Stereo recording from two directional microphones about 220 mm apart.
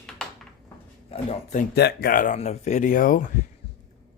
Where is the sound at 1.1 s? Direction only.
30° left (ahead or behind).